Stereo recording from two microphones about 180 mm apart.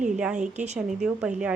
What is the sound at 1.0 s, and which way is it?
Speech, 5° right (ahead or behind).